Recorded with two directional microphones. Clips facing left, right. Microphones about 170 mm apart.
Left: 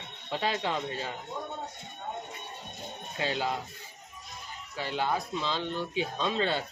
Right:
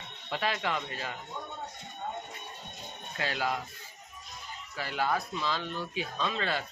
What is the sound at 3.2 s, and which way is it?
Speech, 25° left (ahead or behind).